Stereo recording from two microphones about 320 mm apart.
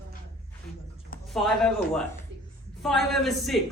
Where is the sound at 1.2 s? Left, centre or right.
Centre.